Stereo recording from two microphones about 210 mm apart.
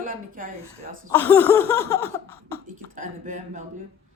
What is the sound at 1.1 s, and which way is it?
Speech, 10° left (ahead or behind).